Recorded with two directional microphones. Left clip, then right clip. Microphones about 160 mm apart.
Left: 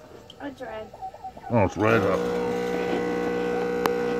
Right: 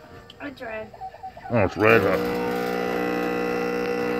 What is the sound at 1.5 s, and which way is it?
Speech, 25° left (ahead or behind).